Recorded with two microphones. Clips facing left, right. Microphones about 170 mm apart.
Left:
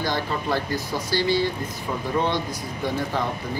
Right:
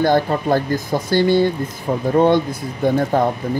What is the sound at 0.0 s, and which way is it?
Speech, 50° right (ahead or behind).